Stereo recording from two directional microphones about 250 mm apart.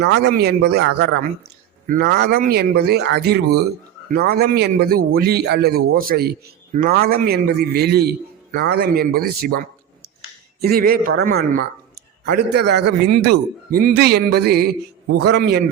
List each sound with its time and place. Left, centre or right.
0.0 s a man's voice: right